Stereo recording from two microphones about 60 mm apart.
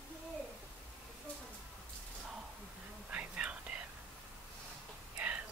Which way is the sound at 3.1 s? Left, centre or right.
Right.